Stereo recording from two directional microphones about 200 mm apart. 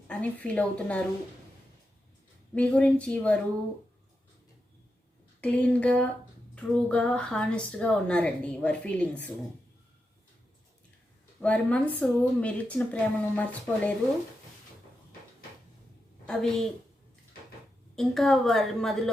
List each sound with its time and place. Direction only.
0.1 s speech: 5° left (ahead or behind)
2.6 s speech: 5° left (ahead or behind)
5.4 s speech: 5° left (ahead or behind)
11.3 s speech: 5° left (ahead or behind)
16.2 s a woman's voice: 5° left (ahead or behind)
17.9 s speech: centre (ahead or behind)